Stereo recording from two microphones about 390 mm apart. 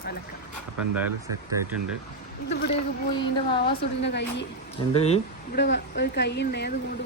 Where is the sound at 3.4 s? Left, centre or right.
Centre.